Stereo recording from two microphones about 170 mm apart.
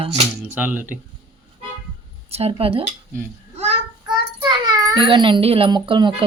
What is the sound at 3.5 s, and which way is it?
Child singing, 40° right (ahead or behind).